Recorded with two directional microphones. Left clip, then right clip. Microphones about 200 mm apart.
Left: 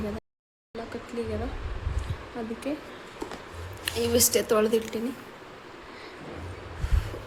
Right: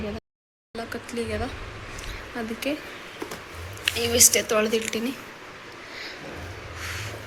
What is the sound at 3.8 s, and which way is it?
Speech, 25° left (ahead or behind).